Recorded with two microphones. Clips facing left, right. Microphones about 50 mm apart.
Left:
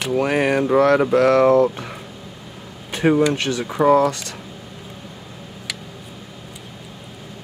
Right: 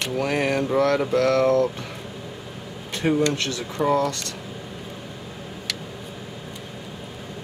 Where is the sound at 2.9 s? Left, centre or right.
Centre.